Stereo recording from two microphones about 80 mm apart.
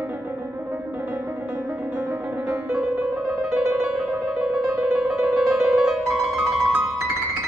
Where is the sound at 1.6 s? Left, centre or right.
Centre.